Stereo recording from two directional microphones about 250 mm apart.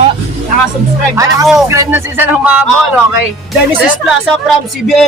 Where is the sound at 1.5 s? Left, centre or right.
Centre.